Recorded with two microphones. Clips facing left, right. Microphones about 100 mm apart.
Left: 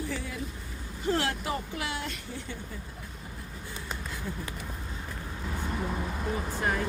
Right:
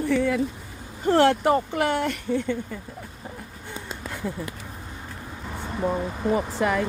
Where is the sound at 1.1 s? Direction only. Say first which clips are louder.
Right 12 dB; 65° right (ahead or behind).